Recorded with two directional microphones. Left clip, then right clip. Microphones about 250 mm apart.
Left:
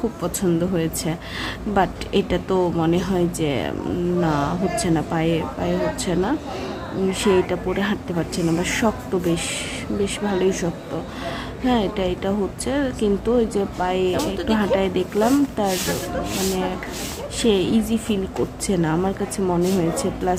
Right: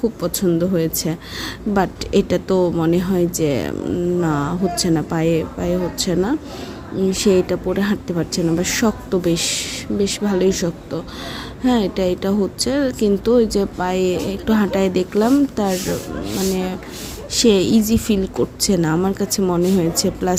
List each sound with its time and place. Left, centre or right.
0.2 s a woman's voice: centre
17.3 s a woman's voice: right